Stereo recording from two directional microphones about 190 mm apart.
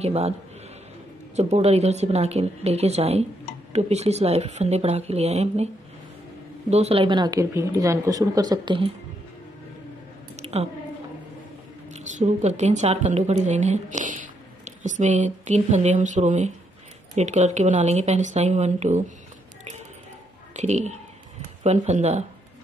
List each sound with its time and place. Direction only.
0.0 s speech: 35° right (ahead or behind)
1.3 s speech: 35° right (ahead or behind)
6.7 s speech: 30° right (ahead or behind)
10.3 s a sound: 35° right (ahead or behind)
11.9 s a woman's voice: 40° right (ahead or behind)
20.5 s speech: 35° right (ahead or behind)